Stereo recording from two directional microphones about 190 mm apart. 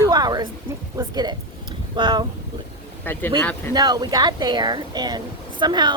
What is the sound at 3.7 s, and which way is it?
Speech, 20° right (ahead or behind).